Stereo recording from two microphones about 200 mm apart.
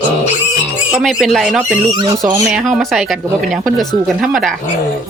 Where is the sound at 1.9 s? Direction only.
25° right (ahead or behind).